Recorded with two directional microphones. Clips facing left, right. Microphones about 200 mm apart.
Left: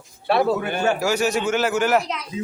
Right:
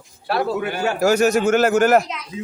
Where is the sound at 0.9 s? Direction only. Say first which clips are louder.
Right 5 dB; 45° right (ahead or behind).